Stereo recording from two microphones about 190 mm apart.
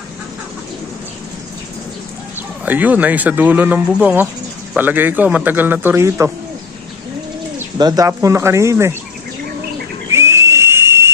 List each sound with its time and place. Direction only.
2.6 s speech: 10° right (ahead or behind)
7.5 s speech: 20° right (ahead or behind)
10.1 s whistle: 15° right (ahead or behind)